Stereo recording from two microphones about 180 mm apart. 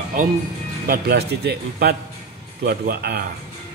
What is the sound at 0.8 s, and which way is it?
Speech, 60° right (ahead or behind).